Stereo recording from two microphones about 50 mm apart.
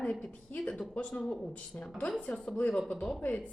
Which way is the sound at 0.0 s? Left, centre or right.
Centre.